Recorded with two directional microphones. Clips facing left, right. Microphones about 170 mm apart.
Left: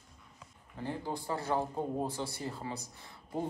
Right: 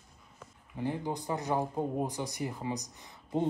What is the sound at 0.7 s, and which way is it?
Speech, 15° right (ahead or behind).